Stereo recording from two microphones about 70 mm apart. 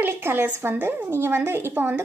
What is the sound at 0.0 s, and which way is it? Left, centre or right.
A woman's voice, right.